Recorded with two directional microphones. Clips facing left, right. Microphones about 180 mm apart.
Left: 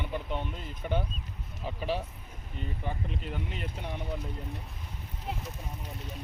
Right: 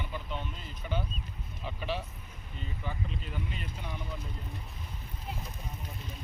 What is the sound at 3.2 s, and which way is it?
Speech, 65° left (ahead or behind).